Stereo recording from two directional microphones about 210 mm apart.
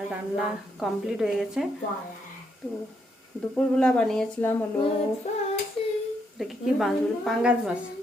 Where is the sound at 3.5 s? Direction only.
5° left (ahead or behind).